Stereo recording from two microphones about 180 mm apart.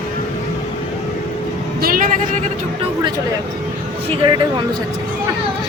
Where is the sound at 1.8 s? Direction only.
50° right (ahead or behind).